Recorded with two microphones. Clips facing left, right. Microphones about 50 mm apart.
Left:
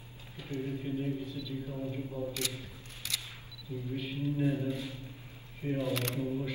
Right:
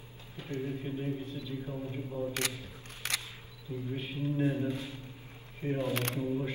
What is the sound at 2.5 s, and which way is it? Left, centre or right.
Single-lens reflex camera, right.